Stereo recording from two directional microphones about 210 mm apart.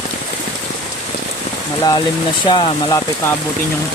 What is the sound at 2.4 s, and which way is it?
Speech, 20° left (ahead or behind).